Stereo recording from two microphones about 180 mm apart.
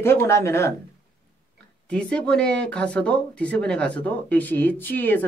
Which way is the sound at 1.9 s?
5° left (ahead or behind).